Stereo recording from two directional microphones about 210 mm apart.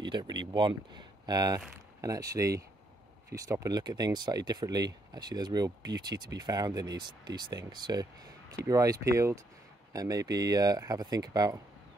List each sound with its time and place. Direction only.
0.0 s speech: 20° right (ahead or behind)